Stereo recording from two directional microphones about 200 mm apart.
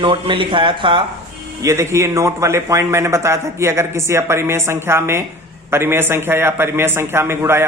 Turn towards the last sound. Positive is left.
turn(degrees=-10)  # may be behind; listen again after turning